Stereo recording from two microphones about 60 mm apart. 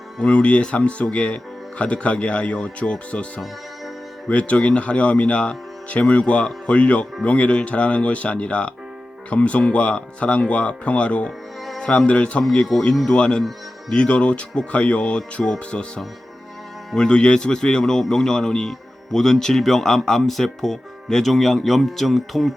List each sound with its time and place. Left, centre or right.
0.2 s a man's voice: left
16.9 s a man's voice: centre